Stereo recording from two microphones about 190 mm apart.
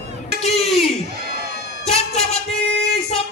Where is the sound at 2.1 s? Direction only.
35° left (ahead or behind).